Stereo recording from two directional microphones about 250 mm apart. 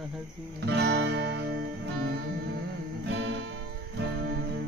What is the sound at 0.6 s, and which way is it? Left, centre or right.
Music, right.